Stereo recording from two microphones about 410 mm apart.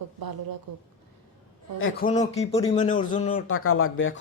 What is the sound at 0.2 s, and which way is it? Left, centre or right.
Speech, right.